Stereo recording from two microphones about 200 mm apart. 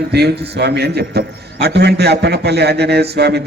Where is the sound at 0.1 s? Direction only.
55° right (ahead or behind).